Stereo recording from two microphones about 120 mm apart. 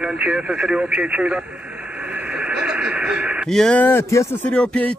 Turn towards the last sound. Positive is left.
turn(degrees=10)  # may be behind; listen again after turning